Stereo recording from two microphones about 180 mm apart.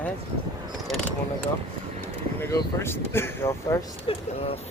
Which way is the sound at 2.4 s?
15° left (ahead or behind).